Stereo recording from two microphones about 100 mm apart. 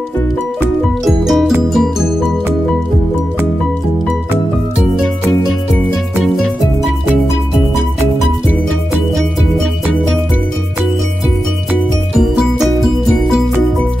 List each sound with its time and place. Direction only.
1.0 s music: centre (ahead or behind)
6.3 s music: 5° left (ahead or behind)
12.2 s music: centre (ahead or behind)